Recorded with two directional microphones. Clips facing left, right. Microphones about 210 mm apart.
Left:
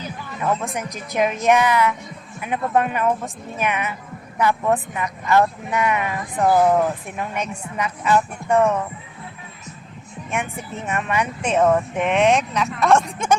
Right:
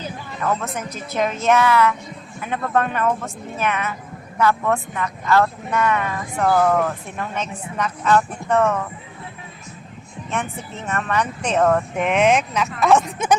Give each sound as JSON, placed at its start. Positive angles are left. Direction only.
{"t": 0.8, "sound": "speech", "side_deg": 15}
{"t": 10.8, "sound": "speech", "side_deg": 10}